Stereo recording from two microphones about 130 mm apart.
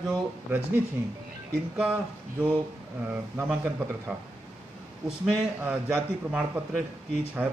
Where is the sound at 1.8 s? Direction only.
10° right (ahead or behind).